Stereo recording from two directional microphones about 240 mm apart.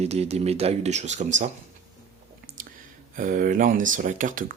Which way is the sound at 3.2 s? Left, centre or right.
Right.